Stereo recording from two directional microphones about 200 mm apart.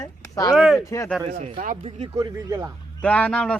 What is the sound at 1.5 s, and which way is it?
Speech, 40° right (ahead or behind).